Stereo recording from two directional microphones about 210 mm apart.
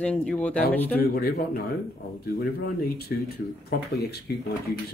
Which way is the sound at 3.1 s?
50° left (ahead or behind).